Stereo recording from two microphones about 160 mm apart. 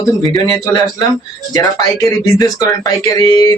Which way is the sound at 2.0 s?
20° left (ahead or behind).